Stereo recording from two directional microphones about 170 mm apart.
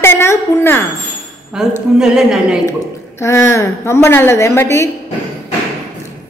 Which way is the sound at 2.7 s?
15° left (ahead or behind).